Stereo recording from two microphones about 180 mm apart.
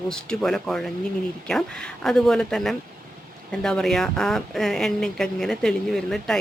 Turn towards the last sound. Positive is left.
turn(degrees=0)  # may be behind; listen again after turning